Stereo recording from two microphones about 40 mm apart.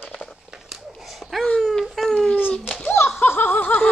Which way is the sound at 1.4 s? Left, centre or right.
Centre.